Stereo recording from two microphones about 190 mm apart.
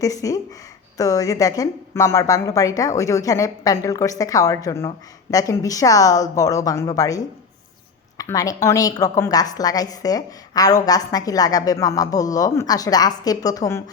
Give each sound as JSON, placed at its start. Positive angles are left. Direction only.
{"t": 0.0, "sound": "a woman's voice", "side_deg": 20}